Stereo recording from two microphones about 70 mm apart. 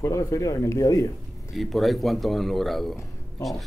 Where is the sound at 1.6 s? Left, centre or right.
Centre.